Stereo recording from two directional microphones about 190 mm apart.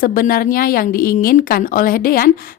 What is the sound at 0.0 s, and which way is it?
A woman's voice, 50° left (ahead or behind).